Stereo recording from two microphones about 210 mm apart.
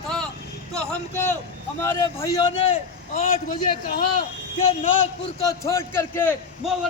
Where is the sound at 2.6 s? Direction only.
30° left (ahead or behind).